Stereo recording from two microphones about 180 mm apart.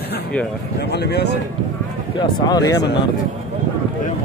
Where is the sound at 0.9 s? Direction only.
65° left (ahead or behind).